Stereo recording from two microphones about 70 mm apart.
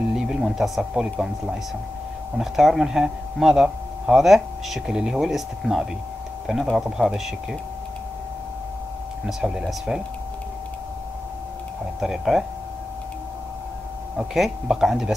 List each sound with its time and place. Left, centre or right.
0.1 s speech: centre
9.2 s speech: centre
12.0 s speech: centre
14.1 s speech: centre